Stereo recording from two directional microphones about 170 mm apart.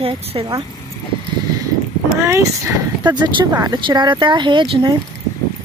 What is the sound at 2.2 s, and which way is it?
Speech, 15° right (ahead or behind).